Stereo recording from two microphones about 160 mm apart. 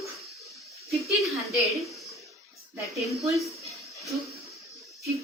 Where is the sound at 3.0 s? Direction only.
Centre (ahead or behind).